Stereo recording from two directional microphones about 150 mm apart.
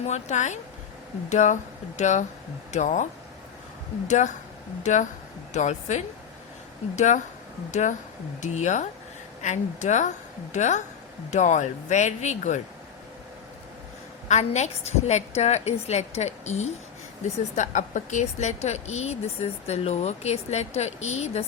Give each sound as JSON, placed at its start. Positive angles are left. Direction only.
{"t": 0.0, "sound": "speech", "side_deg": 50}
{"t": 14.3, "sound": "speech", "side_deg": 50}